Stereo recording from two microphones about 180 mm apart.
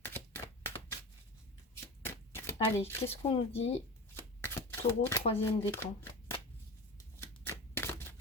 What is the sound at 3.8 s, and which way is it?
Shuffling cards, 15° left (ahead or behind).